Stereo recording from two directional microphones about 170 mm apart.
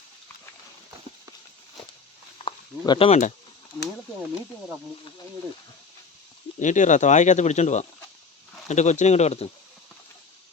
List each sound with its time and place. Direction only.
2.4 s a sound: 30° left (ahead or behind)
3.1 s speech: 45° left (ahead or behind)
6.6 s speech: 45° left (ahead or behind)